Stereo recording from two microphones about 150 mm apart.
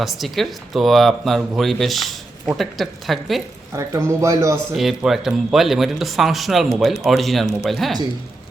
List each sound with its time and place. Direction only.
0.0 s speech: centre (ahead or behind)
3.7 s a man's voice: 20° right (ahead or behind)
4.7 s speech: centre (ahead or behind)